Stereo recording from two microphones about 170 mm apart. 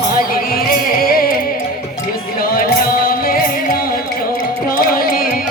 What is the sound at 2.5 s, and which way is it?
Music, 60° left (ahead or behind).